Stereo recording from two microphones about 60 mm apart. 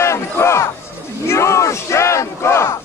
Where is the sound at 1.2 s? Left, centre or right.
Left.